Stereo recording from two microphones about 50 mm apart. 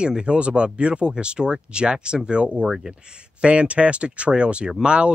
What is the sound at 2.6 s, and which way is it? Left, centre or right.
Speech, centre.